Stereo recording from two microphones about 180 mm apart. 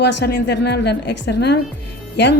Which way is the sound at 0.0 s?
70° left (ahead or behind).